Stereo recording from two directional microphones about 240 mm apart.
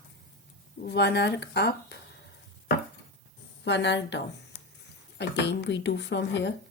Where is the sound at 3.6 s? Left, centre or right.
Left.